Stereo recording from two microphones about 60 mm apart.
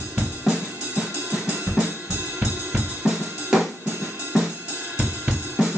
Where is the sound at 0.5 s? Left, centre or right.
Centre.